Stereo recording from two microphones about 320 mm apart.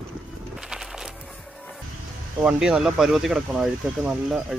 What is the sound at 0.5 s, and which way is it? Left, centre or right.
Music, centre.